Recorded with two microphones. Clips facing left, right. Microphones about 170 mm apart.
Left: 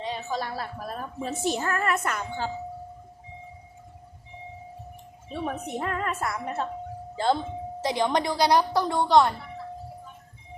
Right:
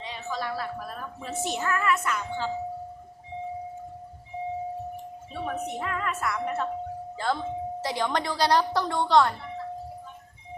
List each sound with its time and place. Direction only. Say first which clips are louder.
0.0 s a woman's voice: left 2 dB; 35° left (ahead or behind)
5.3 s a woman's voice: left 1 dB; 40° left (ahead or behind)
7.8 s speech: left 5 dB; 20° left (ahead or behind)